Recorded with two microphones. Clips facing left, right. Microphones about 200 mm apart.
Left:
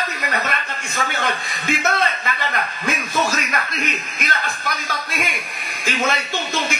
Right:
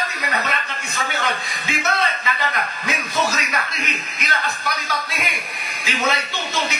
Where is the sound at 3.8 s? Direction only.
50° left (ahead or behind).